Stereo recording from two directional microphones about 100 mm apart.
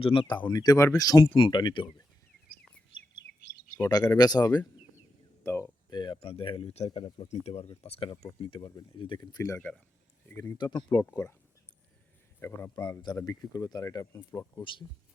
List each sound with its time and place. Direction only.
0.0 s speech: 60° left (ahead or behind); by 1.2 s 35° left (ahead or behind)
1.2 s speech: 55° left (ahead or behind)
3.8 s speech: 40° left (ahead or behind)
5.4 s speech: 25° left (ahead or behind)
5.9 s speech: 50° left (ahead or behind)
6.1 s speech: 70° left (ahead or behind)
8.2 s speech: 60° left (ahead or behind); by 9.5 s 45° left (ahead or behind)
9.6 s speech: 15° left (ahead or behind)
10.6 s speech: 50° left (ahead or behind)
12.4 s speech: 25° left (ahead or behind)
12.7 s speech: 35° left (ahead or behind)
14.6 s speech: 55° left (ahead or behind)